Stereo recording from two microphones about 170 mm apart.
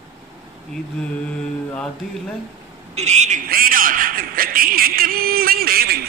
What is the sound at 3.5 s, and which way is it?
Speech, 55° right (ahead or behind).